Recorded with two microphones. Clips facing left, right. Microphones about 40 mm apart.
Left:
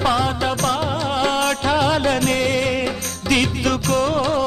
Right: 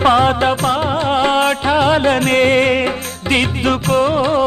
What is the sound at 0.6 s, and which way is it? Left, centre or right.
Music, right.